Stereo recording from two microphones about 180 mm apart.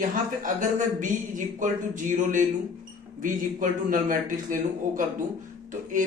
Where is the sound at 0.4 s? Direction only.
45° right (ahead or behind).